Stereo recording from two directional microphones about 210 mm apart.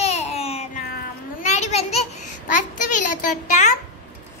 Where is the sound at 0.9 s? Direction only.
35° left (ahead or behind).